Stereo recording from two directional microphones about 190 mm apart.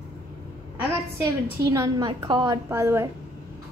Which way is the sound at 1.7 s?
20° right (ahead or behind).